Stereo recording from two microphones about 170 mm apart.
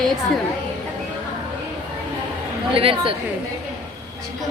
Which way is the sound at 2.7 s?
30° right (ahead or behind).